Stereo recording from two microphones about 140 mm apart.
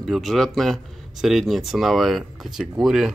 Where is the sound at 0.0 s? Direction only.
Centre (ahead or behind).